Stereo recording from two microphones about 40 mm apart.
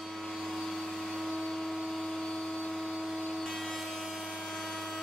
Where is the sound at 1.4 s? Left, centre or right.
Centre.